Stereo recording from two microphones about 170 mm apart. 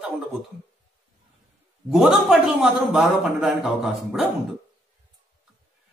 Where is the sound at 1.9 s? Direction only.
Centre (ahead or behind).